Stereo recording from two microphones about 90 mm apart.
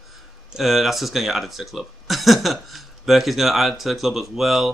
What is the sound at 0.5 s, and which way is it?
Speech, 5° right (ahead or behind).